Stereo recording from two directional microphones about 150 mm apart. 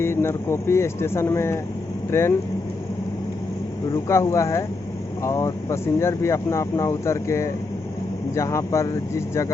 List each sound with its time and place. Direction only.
0.0 s speech: 15° left (ahead or behind)
3.9 s speech: 20° left (ahead or behind)